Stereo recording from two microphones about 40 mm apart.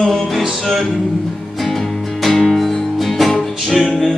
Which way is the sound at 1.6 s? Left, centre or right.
Centre.